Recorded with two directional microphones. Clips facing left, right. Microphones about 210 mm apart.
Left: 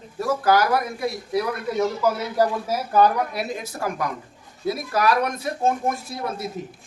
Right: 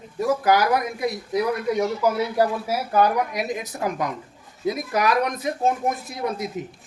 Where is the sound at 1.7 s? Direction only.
15° right (ahead or behind).